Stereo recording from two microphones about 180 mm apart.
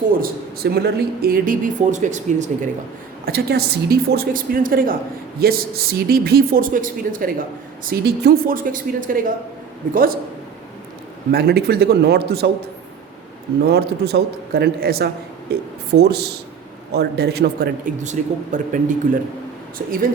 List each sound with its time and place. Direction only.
0.2 s speech: 60° right (ahead or behind); by 2.6 s 40° right (ahead or behind)
3.2 s speech: 60° right (ahead or behind)
7.9 s speech: 60° right (ahead or behind)
11.3 s speech: 60° right (ahead or behind)
13.6 s speech: 60° right (ahead or behind)
18.0 s speech: 40° right (ahead or behind)
19.8 s speech: 60° right (ahead or behind)